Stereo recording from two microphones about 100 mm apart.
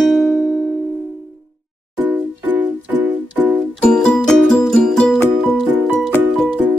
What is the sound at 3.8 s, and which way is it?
Music, 10° left (ahead or behind).